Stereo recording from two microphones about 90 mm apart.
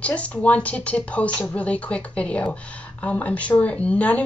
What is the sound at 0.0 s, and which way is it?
Speech, 15° left (ahead or behind).